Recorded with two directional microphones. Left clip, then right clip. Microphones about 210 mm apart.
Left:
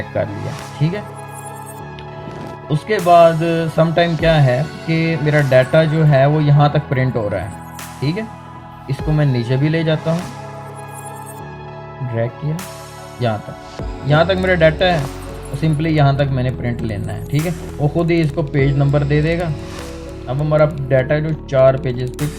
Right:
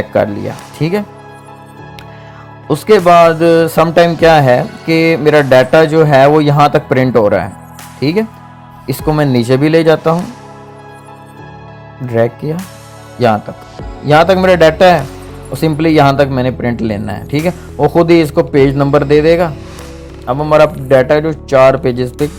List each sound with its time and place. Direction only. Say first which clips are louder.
0.8 s music: right 9 dB; 45° right (ahead or behind)
2.6 s music: right 7 dB; 45° right (ahead or behind)
13.2 s music: right 10 dB; 45° right (ahead or behind)